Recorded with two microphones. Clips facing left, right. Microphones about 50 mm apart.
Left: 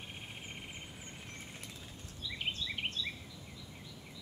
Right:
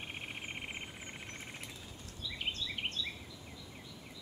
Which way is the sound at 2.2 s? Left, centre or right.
Centre.